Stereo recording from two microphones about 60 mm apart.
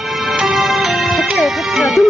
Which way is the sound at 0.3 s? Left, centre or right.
Centre.